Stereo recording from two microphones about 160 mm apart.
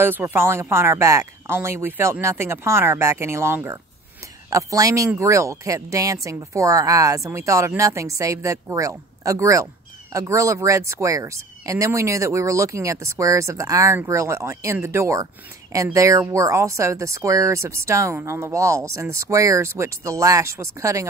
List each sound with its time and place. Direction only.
0.0 s speech: 15° right (ahead or behind)